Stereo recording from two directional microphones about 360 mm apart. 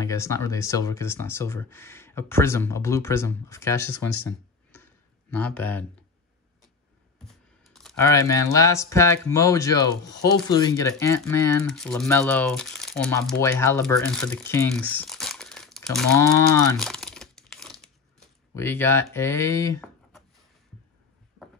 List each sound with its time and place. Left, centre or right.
0.0 s speech: centre
7.6 s speech: centre